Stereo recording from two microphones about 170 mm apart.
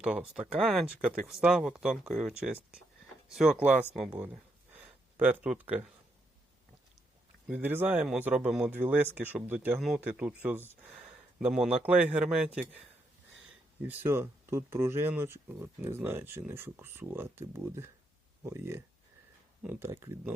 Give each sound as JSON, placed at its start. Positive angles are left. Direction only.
{"t": 0.0, "sound": "speech", "side_deg": -5}
{"t": 4.1, "sound": "a sound", "side_deg": -10}
{"t": 7.4, "sound": "speech", "side_deg": -10}
{"t": 13.8, "sound": "speech", "side_deg": -15}